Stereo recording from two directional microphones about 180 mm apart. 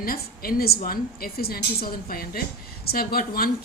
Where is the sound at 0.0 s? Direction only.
55° left (ahead or behind).